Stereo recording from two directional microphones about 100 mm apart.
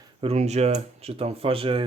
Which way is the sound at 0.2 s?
85° right.